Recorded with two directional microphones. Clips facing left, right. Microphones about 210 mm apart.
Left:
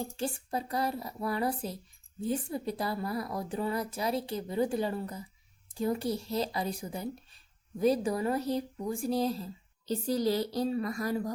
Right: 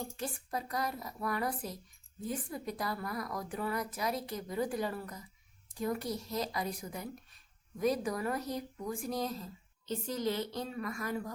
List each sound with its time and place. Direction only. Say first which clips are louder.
0.0 s a woman's voice: left 5 dB; 30° left (ahead or behind)